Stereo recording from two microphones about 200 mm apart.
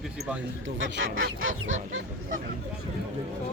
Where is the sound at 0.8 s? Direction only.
75° right (ahead or behind).